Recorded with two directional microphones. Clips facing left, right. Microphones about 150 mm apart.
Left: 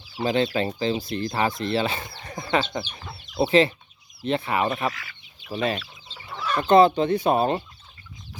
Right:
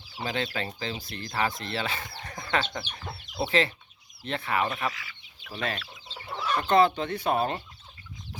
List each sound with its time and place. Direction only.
0.2 s speech: 30° left (ahead or behind)
4.9 s speech: 55° left (ahead or behind)
5.5 s speech: 20° left (ahead or behind)